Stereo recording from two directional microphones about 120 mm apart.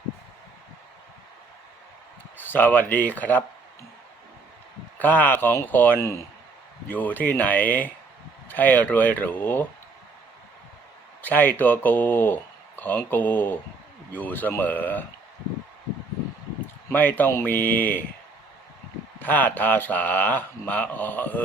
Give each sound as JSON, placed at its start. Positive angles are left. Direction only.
{"t": 2.5, "sound": "speech", "side_deg": 15}
{"t": 4.9, "sound": "speech", "side_deg": 15}
{"t": 11.2, "sound": "speech", "side_deg": 15}
{"t": 16.9, "sound": "speech", "side_deg": 15}
{"t": 19.2, "sound": "speech", "side_deg": 15}